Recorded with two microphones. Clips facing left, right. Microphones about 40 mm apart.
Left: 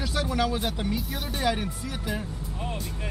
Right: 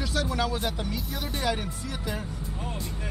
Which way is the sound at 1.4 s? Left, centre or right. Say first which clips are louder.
Left 3 dB; centre.